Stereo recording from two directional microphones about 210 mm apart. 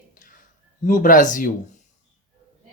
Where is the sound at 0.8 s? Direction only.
40° left (ahead or behind).